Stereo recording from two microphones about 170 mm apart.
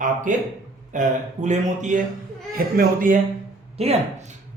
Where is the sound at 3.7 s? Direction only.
40° right (ahead or behind).